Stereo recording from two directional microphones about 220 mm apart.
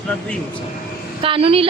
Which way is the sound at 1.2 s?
25° right (ahead or behind).